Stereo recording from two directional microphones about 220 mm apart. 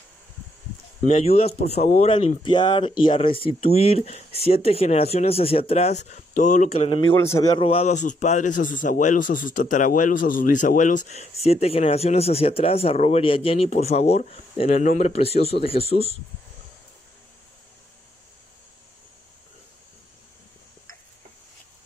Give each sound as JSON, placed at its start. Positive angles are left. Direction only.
{"t": 1.0, "sound": "a man's voice", "side_deg": 30}
{"t": 7.2, "sound": "a man's voice", "side_deg": 15}